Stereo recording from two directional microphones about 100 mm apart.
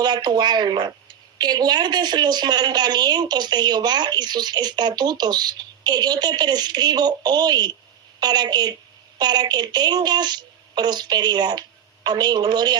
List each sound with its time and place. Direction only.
0.0 s a woman's voice: 45° right (ahead or behind)